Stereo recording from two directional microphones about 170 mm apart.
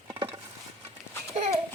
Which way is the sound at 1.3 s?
40° right (ahead or behind).